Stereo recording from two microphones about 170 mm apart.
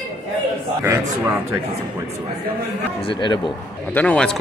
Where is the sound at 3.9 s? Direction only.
5° left (ahead or behind).